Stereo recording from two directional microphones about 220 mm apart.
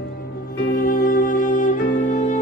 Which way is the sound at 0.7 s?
40° left (ahead or behind).